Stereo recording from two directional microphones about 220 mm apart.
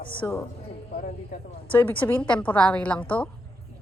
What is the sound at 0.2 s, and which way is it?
Speech, 15° left (ahead or behind).